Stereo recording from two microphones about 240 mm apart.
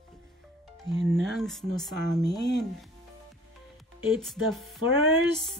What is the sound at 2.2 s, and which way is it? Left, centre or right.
Speech, centre.